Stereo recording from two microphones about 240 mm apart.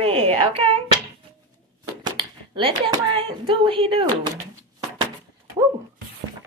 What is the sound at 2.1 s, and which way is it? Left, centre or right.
A child's voice, right.